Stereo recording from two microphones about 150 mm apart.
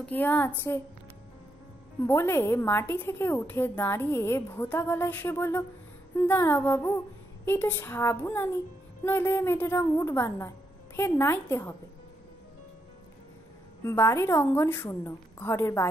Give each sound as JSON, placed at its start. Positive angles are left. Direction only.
{"t": 0.0, "sound": "a woman's voice", "side_deg": 10}
{"t": 2.0, "sound": "a woman's voice", "side_deg": 15}
{"t": 13.8, "sound": "a woman's voice", "side_deg": 15}